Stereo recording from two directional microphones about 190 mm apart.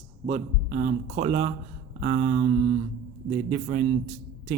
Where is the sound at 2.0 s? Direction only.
35° right (ahead or behind).